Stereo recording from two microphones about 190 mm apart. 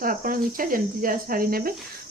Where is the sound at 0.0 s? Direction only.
45° right (ahead or behind).